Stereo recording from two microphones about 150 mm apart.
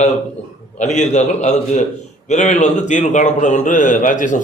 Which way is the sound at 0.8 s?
50° left (ahead or behind).